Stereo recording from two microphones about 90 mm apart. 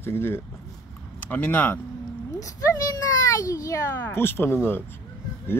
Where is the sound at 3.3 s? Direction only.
40° left (ahead or behind).